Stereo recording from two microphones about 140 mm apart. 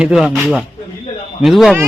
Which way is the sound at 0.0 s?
5° right (ahead or behind).